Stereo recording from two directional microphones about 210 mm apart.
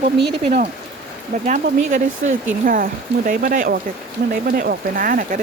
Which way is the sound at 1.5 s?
35° right (ahead or behind).